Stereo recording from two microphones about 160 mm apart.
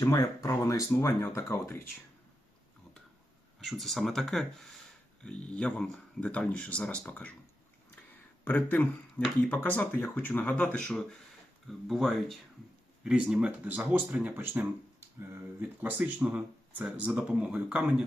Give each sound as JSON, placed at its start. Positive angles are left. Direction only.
{"t": 0.0, "sound": "speech", "side_deg": 20}
{"t": 3.6, "sound": "speech", "side_deg": 0}
{"t": 8.4, "sound": "speech", "side_deg": 10}
{"t": 11.7, "sound": "speech", "side_deg": 0}
{"t": 15.8, "sound": "speech", "side_deg": -10}